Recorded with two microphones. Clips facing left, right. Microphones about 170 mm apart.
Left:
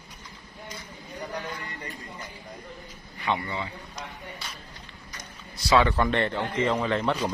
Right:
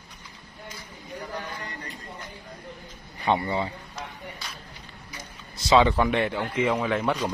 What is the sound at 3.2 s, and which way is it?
Speech, 35° right (ahead or behind).